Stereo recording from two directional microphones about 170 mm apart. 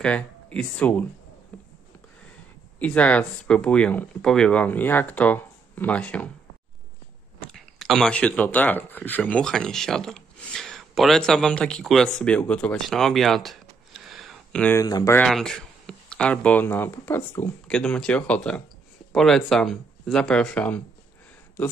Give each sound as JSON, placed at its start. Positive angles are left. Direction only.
{"t": 0.0, "sound": "speech", "side_deg": 5}
{"t": 1.5, "sound": "a sound", "side_deg": 10}
{"t": 2.8, "sound": "speech", "side_deg": 10}
{"t": 7.3, "sound": "speech", "side_deg": 5}
{"t": 14.8, "sound": "speech", "side_deg": 20}
{"t": 15.1, "sound": "speech", "side_deg": 0}